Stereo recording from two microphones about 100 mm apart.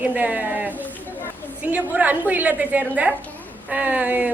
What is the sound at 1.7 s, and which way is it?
A woman's voice, 15° right (ahead or behind).